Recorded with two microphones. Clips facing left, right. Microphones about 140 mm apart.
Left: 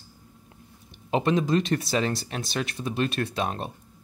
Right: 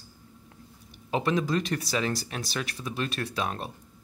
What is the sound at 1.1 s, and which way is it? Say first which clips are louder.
Speech: left 3 dB; 25° left (ahead or behind).